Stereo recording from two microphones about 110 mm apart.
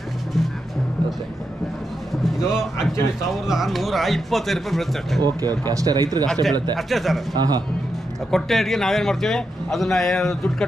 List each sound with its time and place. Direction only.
2.2 s a man's voice: 5° right (ahead or behind)
5.2 s speech: 35° right (ahead or behind)
6.9 s a man's voice: centre (ahead or behind)
7.3 s speech: 40° right (ahead or behind)
8.3 s a man's voice: 5° left (ahead or behind)